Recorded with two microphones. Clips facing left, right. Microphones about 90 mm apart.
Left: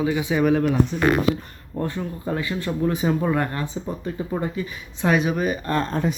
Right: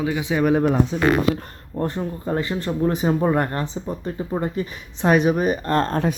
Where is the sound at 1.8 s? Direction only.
35° right (ahead or behind).